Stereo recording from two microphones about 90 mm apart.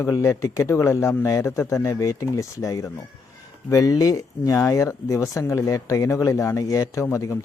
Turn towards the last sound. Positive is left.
turn(degrees=30)  # may be behind; listen again after turning